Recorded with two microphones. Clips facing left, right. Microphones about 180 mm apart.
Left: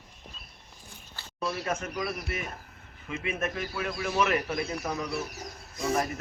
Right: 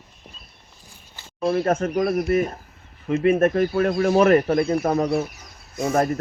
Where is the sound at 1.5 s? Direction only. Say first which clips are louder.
Right 12 dB; 50° right (ahead or behind).